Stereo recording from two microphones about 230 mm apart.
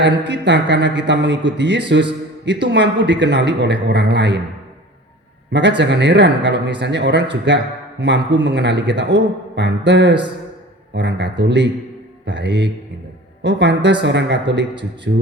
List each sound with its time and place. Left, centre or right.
0.0 s speech: right
5.5 s speech: right